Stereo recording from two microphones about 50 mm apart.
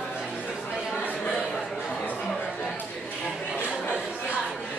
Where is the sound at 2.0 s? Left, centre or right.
Left.